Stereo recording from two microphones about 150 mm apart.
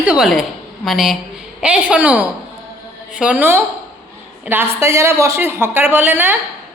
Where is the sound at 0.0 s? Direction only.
5° right (ahead or behind).